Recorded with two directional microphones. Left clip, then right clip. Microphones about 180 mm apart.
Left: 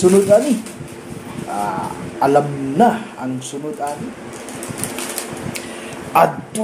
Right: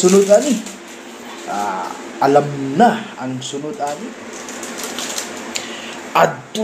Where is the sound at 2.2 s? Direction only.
5° left (ahead or behind).